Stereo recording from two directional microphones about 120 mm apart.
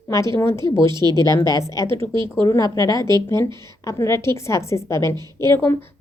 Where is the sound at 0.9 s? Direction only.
35° right (ahead or behind).